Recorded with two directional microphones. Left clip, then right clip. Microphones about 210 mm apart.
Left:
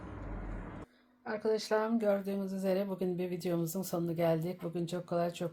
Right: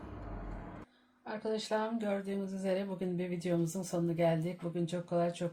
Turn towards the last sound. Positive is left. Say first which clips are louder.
# right 1 dB
turn(degrees=35)  # may be behind; listen again after turning